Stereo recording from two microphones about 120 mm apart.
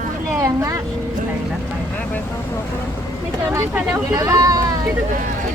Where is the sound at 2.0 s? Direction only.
15° left (ahead or behind).